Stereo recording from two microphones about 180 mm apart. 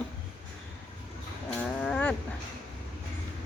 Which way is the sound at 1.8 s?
10° left (ahead or behind).